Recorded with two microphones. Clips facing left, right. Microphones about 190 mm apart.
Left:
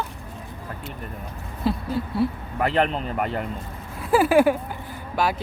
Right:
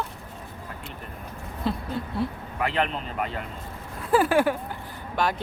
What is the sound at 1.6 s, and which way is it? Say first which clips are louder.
Speech: left 4 dB; 5° left (ahead or behind).